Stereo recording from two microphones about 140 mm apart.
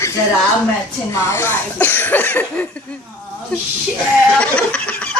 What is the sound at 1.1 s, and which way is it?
Speech, 20° left (ahead or behind).